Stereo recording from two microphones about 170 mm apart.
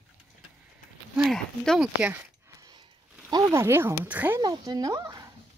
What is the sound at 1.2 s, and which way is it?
Speech, centre (ahead or behind).